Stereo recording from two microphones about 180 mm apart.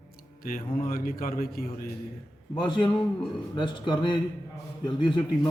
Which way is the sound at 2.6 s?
25° left (ahead or behind).